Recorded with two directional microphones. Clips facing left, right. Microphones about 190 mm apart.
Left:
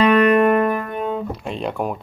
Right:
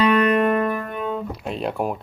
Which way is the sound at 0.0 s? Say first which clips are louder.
Left 3 dB; 50° left (ahead or behind).